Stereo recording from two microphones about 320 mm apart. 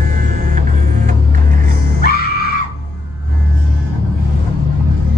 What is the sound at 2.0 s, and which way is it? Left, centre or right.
Screaming, left.